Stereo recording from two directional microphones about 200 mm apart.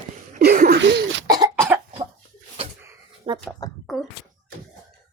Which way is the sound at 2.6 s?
30° right (ahead or behind).